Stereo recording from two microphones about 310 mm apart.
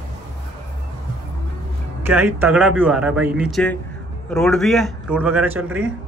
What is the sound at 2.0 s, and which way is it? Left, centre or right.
Speech, centre.